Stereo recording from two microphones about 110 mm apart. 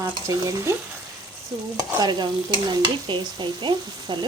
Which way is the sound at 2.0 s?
40° right (ahead or behind).